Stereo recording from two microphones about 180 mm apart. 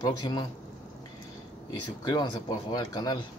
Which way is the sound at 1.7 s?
25° left (ahead or behind).